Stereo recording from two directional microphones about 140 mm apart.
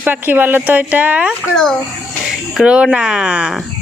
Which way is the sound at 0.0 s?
15° right (ahead or behind).